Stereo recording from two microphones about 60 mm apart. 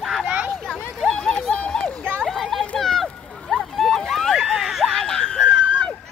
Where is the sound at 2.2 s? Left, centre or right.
Centre.